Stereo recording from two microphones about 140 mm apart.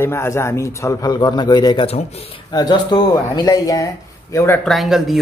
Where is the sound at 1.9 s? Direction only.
45° left (ahead or behind).